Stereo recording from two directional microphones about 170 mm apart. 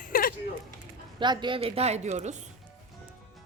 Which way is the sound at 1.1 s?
25° right (ahead or behind).